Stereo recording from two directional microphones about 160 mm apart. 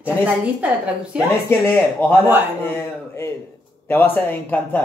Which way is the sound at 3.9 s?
10° left (ahead or behind).